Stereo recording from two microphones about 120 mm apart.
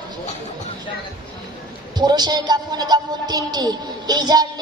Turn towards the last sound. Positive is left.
turn(degrees=-35)  # may be behind; listen again after turning